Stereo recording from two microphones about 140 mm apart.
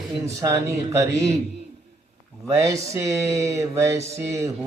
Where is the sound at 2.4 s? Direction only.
25° right (ahead or behind).